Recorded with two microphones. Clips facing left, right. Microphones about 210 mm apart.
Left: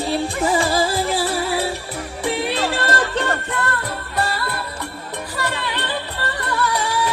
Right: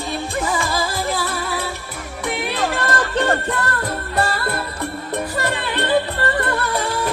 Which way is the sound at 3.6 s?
40° right (ahead or behind).